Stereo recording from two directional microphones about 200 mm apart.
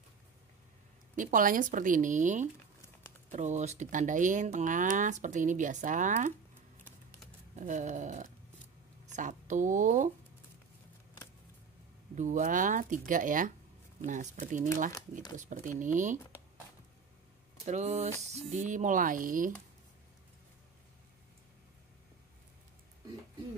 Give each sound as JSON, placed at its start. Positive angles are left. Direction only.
{"t": 1.1, "sound": "speech", "side_deg": -40}
{"t": 7.5, "sound": "speech", "side_deg": -40}
{"t": 12.2, "sound": "speech", "side_deg": -40}
{"t": 17.6, "sound": "speech", "side_deg": -35}